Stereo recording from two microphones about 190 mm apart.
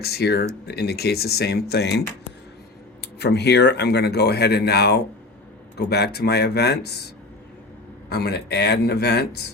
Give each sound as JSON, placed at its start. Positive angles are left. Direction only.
{"t": 0.0, "sound": "speech", "side_deg": 60}
{"t": 8.1, "sound": "speech", "side_deg": 60}